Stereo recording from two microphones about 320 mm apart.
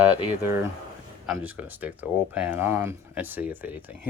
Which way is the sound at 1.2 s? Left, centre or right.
Centre.